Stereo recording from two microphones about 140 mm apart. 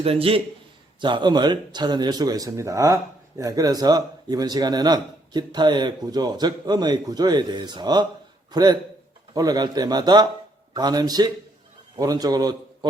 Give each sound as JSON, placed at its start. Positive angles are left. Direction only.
{"t": 0.0, "sound": "a man's voice", "side_deg": -40}